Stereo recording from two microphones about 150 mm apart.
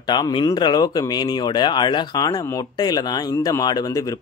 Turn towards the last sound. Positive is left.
turn(degrees=25)  # may be behind; listen again after turning